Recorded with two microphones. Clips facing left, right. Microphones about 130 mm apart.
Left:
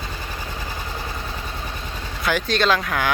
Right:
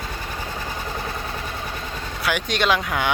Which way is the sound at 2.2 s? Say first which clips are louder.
Left 2 dB; 10° right (ahead or behind).